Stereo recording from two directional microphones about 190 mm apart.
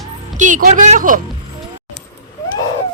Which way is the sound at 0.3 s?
40° right (ahead or behind).